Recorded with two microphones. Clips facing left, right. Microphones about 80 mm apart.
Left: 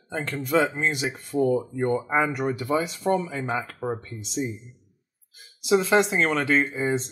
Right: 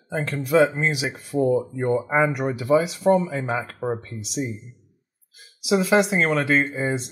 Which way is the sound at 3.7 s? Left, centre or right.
Centre.